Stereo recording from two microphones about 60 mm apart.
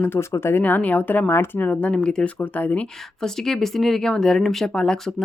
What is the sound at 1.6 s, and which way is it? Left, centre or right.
A woman's voice, left.